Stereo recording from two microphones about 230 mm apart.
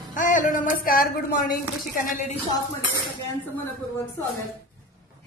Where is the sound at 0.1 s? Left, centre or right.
Left.